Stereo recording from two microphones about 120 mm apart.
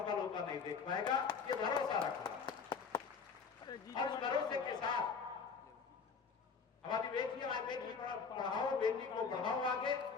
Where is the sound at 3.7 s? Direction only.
35° left (ahead or behind).